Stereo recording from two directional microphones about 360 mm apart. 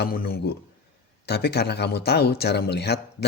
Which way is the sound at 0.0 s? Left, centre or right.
Left.